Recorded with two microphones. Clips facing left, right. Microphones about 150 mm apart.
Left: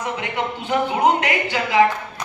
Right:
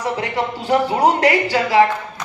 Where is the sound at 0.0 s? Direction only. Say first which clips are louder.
Right 3 dB; 35° right (ahead or behind).